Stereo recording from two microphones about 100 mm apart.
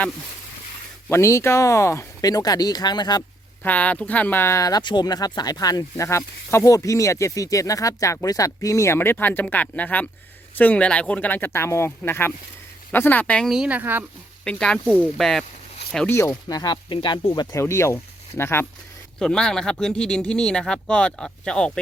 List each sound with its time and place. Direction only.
1.0 s speech: 25° left (ahead or behind)
2.2 s speech: 40° left (ahead or behind)
3.6 s speech: 15° left (ahead or behind); by 4.8 s 30° left (ahead or behind)
4.8 s speech: 50° left (ahead or behind); by 13.5 s 10° left (ahead or behind)
13.5 s speech: 10° right (ahead or behind)
14.4 s speech: 5° left (ahead or behind)
16.0 s speech: 25° left (ahead or behind)
16.5 s speech: 40° left (ahead or behind)
16.7 s speech: 55° left (ahead or behind)
17.3 s speech: 40° left (ahead or behind)
17.6 s speech: 30° left (ahead or behind)
19.2 s speech: 5° left (ahead or behind)